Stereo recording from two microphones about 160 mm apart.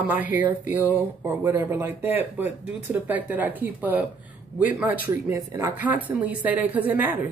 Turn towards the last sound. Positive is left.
turn(degrees=-10)  # may be behind; listen again after turning